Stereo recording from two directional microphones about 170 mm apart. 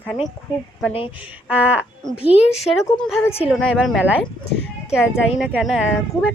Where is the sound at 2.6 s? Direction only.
Centre (ahead or behind).